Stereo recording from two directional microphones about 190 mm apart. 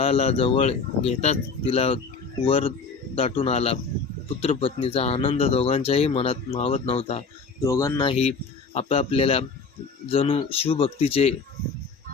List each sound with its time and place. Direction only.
0.0 s speech: 30° left (ahead or behind)
7.6 s speech: 15° left (ahead or behind)
8.0 s speech: 35° left (ahead or behind)